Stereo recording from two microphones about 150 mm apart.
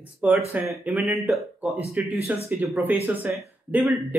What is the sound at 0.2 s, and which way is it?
Speech, 10° right (ahead or behind).